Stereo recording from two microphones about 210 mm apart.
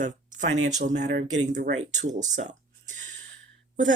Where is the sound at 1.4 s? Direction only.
35° right (ahead or behind).